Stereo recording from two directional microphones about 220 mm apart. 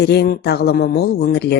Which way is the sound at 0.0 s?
50° left (ahead or behind).